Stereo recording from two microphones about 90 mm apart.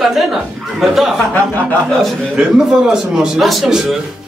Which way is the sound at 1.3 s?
15° left (ahead or behind).